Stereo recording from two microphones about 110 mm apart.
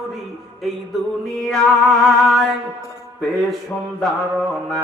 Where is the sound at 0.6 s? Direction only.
Centre (ahead or behind).